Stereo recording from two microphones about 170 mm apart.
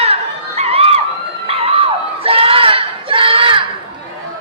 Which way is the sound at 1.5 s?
35° right (ahead or behind).